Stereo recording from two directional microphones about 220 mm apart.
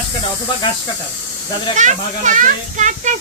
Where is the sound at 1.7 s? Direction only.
35° right (ahead or behind).